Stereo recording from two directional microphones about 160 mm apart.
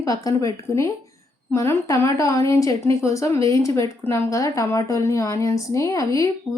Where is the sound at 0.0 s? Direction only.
20° left (ahead or behind).